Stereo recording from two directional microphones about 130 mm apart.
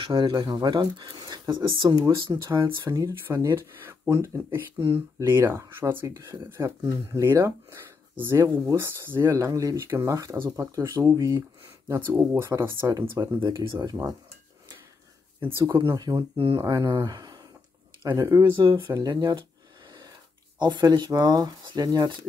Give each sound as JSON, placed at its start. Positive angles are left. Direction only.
{"t": 0.0, "sound": "speech", "side_deg": -40}
{"t": 2.4, "sound": "speech", "side_deg": -20}
{"t": 15.5, "sound": "speech", "side_deg": -20}
{"t": 16.3, "sound": "speech", "side_deg": -45}
{"t": 16.6, "sound": "speech", "side_deg": -30}
{"t": 20.5, "sound": "speech", "side_deg": -35}